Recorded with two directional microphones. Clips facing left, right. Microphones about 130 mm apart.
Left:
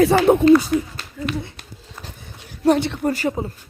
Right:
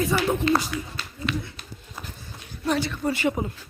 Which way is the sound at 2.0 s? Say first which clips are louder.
Left 1 dB; 20° left (ahead or behind).